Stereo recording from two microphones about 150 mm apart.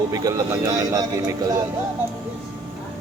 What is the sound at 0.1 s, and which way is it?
Mantra, 25° right (ahead or behind).